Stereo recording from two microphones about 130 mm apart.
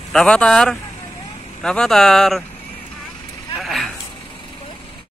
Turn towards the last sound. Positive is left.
turn(degrees=0)  # may be behind; listen again after turning